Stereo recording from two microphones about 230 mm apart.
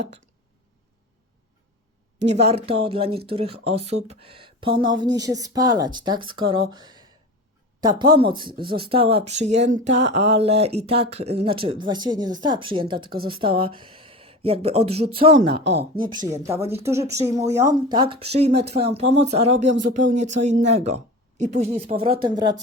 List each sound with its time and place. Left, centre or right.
2.1 s a woman's voice: right
2.5 s speech: right
15.4 s speech: right
15.8 s speech: right
18.3 s a woman's voice: right